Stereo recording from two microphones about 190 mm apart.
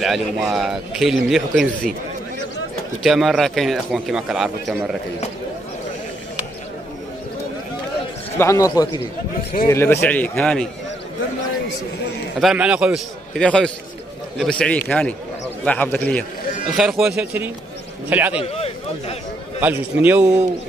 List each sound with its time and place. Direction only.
0.0 s speech: centre (ahead or behind)
3.0 s speech: centre (ahead or behind)
8.4 s a man's voice: 15° left (ahead or behind)
12.4 s a man's voice: 5° right (ahead or behind)
16.7 s a man's voice: 5° right (ahead or behind)
18.4 s a man's voice: 30° left (ahead or behind)
19.6 s a man's voice: 10° right (ahead or behind)